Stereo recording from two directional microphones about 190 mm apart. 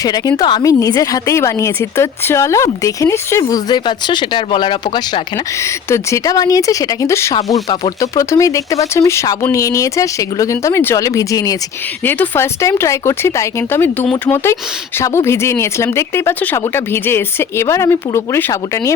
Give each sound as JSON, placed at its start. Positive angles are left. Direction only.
{"t": 0.0, "sound": "a woman's voice", "side_deg": 20}
{"t": 5.5, "sound": "a woman's voice", "side_deg": 15}